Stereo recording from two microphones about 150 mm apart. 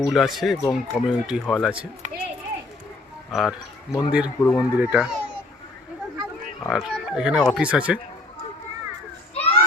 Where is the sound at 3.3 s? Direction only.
Centre (ahead or behind).